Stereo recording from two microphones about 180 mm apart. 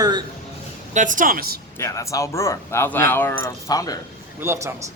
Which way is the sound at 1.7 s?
15° left (ahead or behind).